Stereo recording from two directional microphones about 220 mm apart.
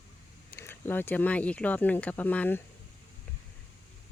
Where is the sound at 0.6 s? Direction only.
10° left (ahead or behind).